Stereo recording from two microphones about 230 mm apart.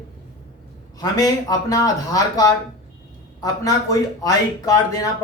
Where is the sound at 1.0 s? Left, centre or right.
Centre.